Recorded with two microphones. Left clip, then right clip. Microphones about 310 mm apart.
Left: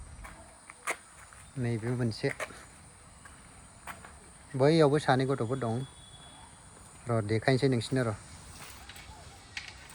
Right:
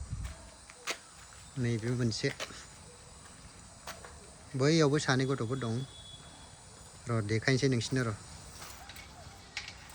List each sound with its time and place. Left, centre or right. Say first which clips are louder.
0.9 s a sound: left 3 dB; centre
1.6 s speech: left 1 dB; centre
4.5 s speech: left 4 dB; centre
7.1 s speech: left 3 dB; centre